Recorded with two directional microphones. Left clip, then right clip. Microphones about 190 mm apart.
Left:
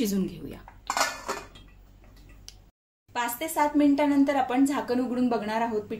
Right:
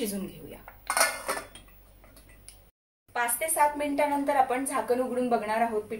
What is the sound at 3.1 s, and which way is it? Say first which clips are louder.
A woman's voice: even; 35° left (ahead or behind).